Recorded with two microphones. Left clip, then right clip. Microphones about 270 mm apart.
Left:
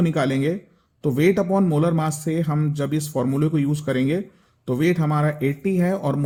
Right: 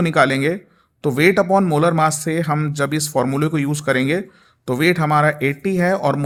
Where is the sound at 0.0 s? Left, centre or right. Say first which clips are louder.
Right 6 dB; right.